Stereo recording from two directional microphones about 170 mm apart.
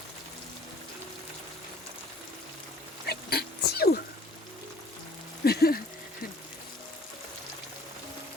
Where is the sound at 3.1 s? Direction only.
65° left (ahead or behind).